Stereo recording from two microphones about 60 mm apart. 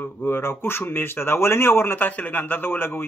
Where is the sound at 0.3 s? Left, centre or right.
Left.